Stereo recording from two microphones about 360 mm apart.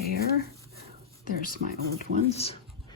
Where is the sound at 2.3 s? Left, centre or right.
Centre.